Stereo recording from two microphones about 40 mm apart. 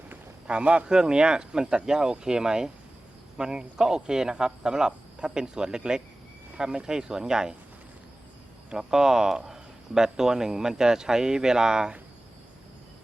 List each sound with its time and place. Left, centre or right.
0.4 s speech: right
0.9 s speech: centre
8.7 s speech: centre